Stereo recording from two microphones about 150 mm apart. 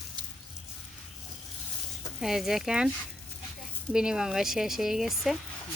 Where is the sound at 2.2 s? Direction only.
Centre (ahead or behind).